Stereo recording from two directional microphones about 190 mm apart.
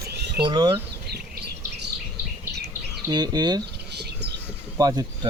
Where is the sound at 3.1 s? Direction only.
20° right (ahead or behind).